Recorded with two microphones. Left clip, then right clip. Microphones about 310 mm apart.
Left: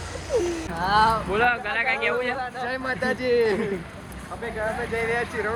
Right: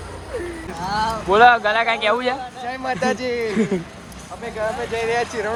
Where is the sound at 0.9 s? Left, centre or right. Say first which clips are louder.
Left 3 dB; left.